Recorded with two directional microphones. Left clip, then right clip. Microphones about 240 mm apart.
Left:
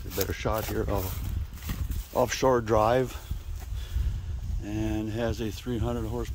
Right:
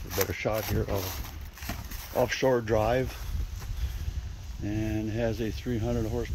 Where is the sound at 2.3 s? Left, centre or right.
Left.